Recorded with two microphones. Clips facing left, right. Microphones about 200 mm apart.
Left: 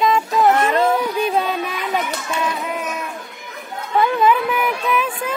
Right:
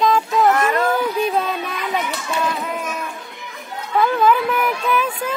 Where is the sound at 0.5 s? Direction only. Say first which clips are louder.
Left 1 dB; 25° left (ahead or behind).